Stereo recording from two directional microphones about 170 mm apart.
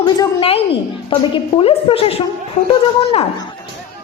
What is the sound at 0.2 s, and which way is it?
A woman's voice, 35° left (ahead or behind).